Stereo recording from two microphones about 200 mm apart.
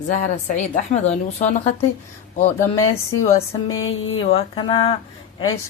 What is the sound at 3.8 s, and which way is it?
Speech, 80° left.